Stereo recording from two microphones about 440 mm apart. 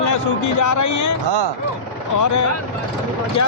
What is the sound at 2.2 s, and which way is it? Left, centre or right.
Speech, left.